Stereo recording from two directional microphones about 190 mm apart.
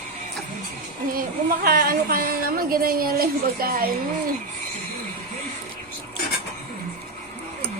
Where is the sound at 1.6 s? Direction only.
50° right (ahead or behind).